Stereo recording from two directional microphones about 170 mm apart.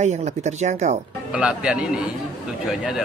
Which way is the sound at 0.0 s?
45° right (ahead or behind).